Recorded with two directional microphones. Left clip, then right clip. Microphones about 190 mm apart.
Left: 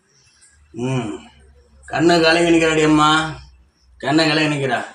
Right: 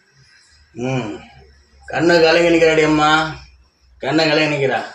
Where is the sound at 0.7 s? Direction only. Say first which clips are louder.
Right 1 dB; 50° left (ahead or behind).